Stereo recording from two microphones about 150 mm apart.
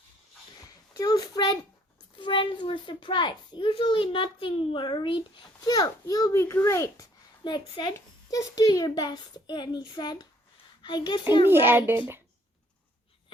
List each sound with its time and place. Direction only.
0.9 s a child's voice: 25° left (ahead or behind)
7.4 s a child's voice: 30° left (ahead or behind)
11.4 s a child's voice: 15° right (ahead or behind)